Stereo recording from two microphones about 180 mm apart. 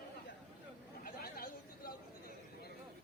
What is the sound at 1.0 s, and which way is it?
Chatter, 55° left (ahead or behind).